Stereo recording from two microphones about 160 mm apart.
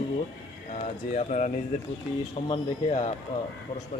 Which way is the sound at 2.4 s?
40° left (ahead or behind).